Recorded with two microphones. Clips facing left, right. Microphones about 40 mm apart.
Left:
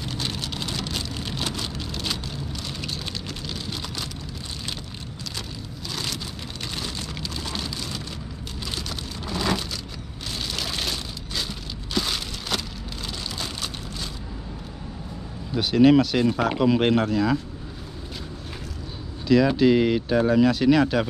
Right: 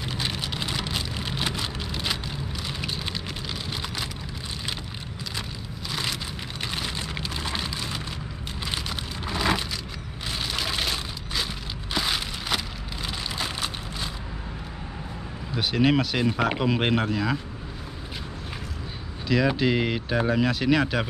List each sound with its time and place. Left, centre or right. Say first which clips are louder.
0.0 s vehicle: even; centre
5.9 s a sound: right 2 dB; centre
6.7 s rain on surface: right 1 dB; right
8.6 s a sound: right 1 dB; right
15.5 s speech: left 6 dB; centre
19.2 s speech: left 5 dB; centre